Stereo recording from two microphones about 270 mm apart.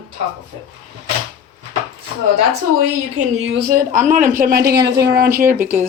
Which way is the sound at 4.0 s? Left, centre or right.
Right.